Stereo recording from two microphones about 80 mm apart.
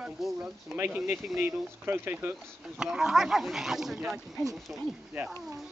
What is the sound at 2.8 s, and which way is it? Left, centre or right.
Speech, centre.